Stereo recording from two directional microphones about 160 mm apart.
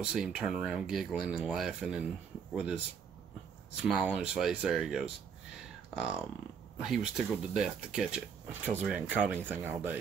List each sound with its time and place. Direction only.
0.0 s speech: 5° right (ahead or behind)
3.8 s speech: 5° right (ahead or behind)